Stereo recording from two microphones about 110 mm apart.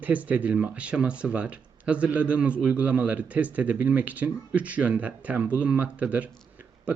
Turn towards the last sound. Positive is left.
turn(degrees=-15)  # may be behind; listen again after turning